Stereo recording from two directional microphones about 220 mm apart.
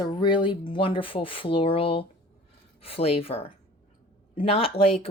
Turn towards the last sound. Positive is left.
turn(degrees=25)  # may be behind; listen again after turning